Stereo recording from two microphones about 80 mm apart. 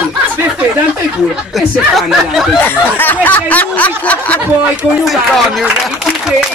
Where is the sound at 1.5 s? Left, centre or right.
Centre.